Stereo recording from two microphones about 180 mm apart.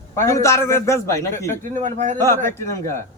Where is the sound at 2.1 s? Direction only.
15° left (ahead or behind).